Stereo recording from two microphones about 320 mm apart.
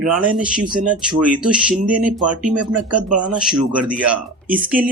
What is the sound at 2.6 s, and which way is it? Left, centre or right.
Speech, right.